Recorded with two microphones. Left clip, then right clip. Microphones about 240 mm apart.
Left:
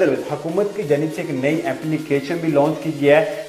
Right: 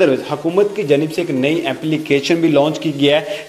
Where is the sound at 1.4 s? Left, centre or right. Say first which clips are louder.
Right 1 dB; right.